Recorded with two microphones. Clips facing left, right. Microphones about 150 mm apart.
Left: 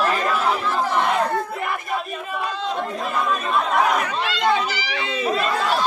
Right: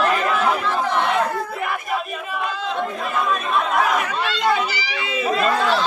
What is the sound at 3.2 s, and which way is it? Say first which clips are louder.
Speech: right 1 dB; centre (ahead or behind).